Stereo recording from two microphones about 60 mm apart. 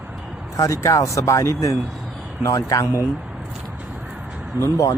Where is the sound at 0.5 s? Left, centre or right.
Left.